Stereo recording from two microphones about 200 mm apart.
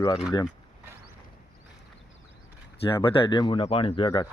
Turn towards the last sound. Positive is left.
turn(degrees=25)  # may be behind; listen again after turning